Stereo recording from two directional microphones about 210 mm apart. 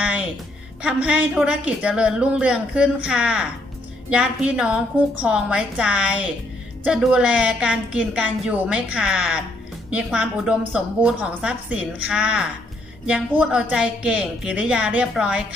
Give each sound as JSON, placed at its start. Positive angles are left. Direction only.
{"t": 0.0, "sound": "music", "side_deg": -5}
{"t": 1.0, "sound": "a woman's voice", "side_deg": -5}